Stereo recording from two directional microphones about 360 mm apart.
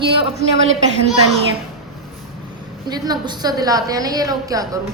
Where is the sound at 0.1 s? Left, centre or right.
Centre.